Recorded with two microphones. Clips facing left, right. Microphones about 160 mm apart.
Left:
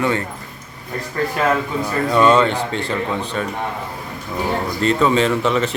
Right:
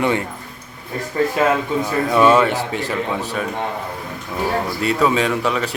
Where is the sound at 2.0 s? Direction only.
5° right (ahead or behind).